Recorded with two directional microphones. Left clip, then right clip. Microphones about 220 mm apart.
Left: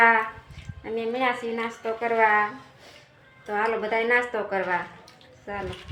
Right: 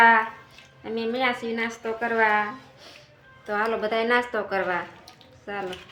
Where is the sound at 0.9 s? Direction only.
10° right (ahead or behind).